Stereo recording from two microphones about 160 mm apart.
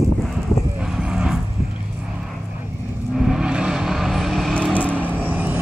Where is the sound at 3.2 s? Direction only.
5° right (ahead or behind).